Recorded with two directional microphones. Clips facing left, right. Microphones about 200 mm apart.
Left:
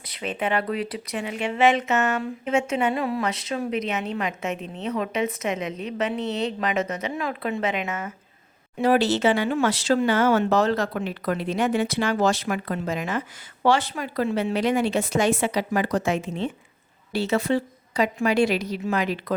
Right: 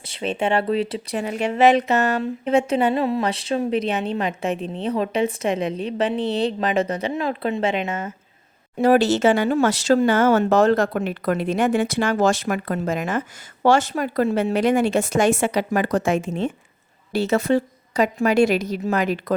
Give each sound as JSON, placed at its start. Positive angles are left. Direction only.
{"t": 0.1, "sound": "speech", "side_deg": -30}
{"t": 8.8, "sound": "speech", "side_deg": -45}